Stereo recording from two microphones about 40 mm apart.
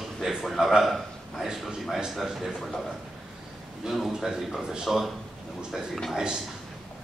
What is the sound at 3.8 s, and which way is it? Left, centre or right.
Speech, centre.